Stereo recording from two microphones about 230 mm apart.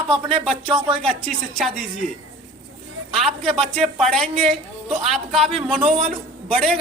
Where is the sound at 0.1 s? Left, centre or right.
Right.